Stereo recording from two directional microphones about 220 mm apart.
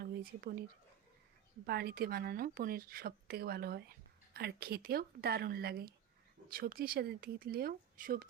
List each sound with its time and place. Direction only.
0.0 s whispering: 45° right (ahead or behind)
1.6 s speech: 45° right (ahead or behind)